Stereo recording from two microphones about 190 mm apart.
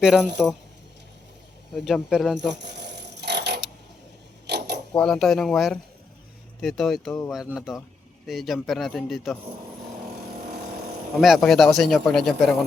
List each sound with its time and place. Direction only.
0.4 s speech: centre (ahead or behind)
1.7 s speech: centre (ahead or behind)
2.5 s a sound: 65° right (ahead or behind)
4.4 s mechanisms: 60° right (ahead or behind)
4.9 s speech: 5° left (ahead or behind)
11.2 s speech: centre (ahead or behind)